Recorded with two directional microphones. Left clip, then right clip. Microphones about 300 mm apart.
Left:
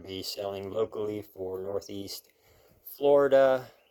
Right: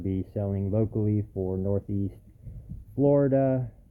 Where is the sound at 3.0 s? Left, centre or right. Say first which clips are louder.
Left 2 dB; centre.